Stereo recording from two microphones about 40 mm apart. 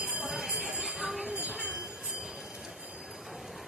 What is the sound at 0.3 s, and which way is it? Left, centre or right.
Jingle bell, centre.